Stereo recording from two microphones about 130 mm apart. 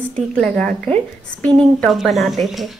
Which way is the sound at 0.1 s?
5° left (ahead or behind).